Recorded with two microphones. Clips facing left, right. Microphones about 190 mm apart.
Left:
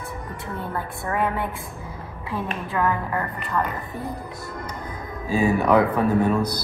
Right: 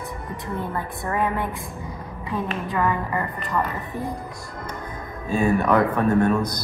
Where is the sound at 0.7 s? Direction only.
Centre (ahead or behind).